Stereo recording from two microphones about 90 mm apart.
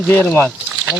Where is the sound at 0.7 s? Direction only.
15° right (ahead or behind).